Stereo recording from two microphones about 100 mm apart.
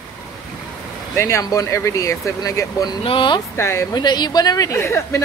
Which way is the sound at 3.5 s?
25° left (ahead or behind).